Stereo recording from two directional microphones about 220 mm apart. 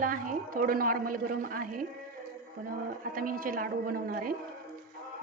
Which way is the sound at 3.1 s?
40° right (ahead or behind).